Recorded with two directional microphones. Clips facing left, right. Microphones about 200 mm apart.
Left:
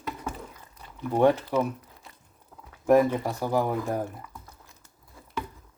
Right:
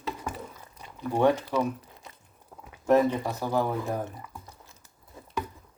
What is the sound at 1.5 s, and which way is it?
Speech, 15° left (ahead or behind).